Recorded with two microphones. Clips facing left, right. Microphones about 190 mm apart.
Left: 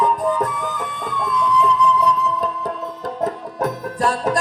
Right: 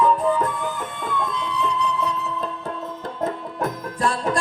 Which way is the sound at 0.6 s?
40° left (ahead or behind).